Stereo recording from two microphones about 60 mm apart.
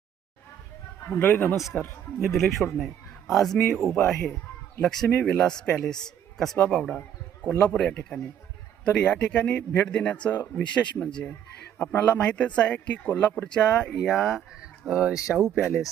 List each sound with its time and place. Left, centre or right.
1.2 s a man's voice: left
2.1 s a man's voice: centre
13.9 s speech: centre
14.6 s a sound: centre